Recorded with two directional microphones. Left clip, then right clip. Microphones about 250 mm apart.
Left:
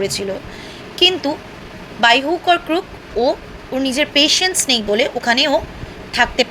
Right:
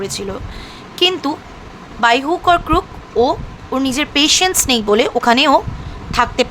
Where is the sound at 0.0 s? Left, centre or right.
Centre.